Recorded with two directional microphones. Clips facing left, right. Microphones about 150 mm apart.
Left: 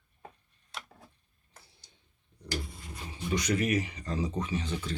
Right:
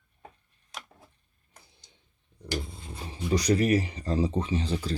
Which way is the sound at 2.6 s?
25° right (ahead or behind).